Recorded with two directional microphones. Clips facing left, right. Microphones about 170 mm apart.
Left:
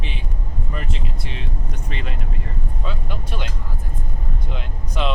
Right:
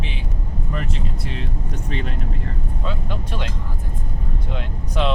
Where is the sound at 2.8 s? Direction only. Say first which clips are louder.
Right 3 dB; 5° left (ahead or behind).